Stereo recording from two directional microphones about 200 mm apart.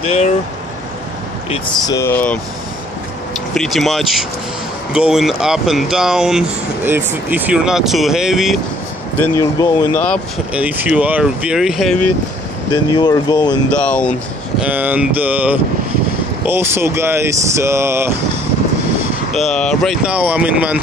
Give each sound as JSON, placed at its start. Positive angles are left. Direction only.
{"t": 1.9, "sound": "speech", "side_deg": 15}
{"t": 3.5, "sound": "speech", "side_deg": 0}
{"t": 9.2, "sound": "speech", "side_deg": 15}
{"t": 10.5, "sound": "speech", "side_deg": -5}
{"t": 12.7, "sound": "speech", "side_deg": 20}
{"t": 13.7, "sound": "speech", "side_deg": 5}
{"t": 14.6, "sound": "speech", "side_deg": -10}
{"t": 19.3, "sound": "speech", "side_deg": 0}